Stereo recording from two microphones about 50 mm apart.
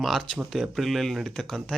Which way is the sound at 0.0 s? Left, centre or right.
Centre.